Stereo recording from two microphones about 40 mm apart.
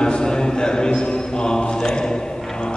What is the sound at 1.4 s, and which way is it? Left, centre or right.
Mantra, centre.